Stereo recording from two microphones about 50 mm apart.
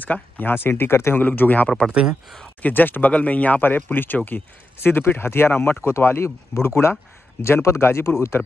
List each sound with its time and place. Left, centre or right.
0.0 s speech: left
0.7 s speech: left
1.2 s speech: left
1.9 s speech: centre
2.6 s speech: left
3.1 s speech: left
4.7 s speech: left
5.9 s speech: left